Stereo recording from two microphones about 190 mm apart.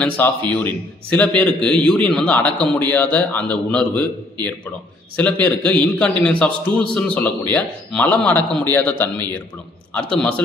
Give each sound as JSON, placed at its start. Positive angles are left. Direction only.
{"t": 0.0, "sound": "a man's voice", "side_deg": 10}